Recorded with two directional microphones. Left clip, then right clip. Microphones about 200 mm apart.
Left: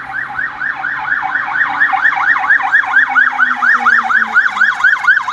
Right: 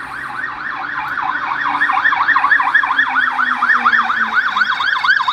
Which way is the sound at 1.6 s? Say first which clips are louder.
Left 1 dB; 5° left (ahead or behind).